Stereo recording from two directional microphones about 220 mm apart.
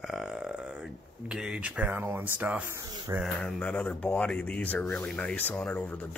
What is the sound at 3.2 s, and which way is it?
Speech, 5° left (ahead or behind).